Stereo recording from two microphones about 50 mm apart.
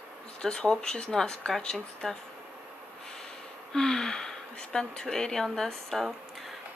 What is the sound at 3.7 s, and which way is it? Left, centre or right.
Speech, centre.